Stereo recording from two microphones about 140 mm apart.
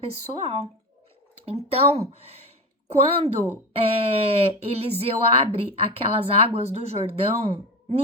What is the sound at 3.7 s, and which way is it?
Speech, 45° right (ahead or behind).